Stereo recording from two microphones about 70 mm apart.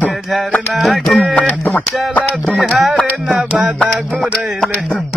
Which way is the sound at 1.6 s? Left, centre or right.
Left.